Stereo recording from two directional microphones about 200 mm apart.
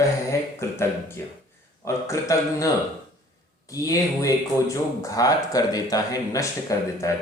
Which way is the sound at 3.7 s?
15° left (ahead or behind).